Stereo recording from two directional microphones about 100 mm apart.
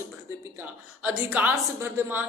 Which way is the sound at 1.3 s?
20° right (ahead or behind).